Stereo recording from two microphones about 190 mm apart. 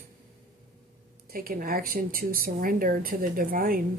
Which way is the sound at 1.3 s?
50° right (ahead or behind).